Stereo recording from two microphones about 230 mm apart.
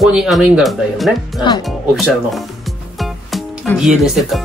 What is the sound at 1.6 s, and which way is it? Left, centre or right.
Speech, centre.